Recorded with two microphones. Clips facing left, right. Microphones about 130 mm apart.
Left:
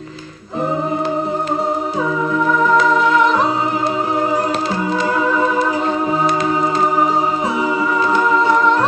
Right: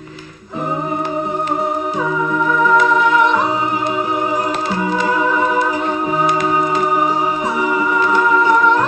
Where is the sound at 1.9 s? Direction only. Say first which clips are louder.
Even; 35° left (ahead or behind).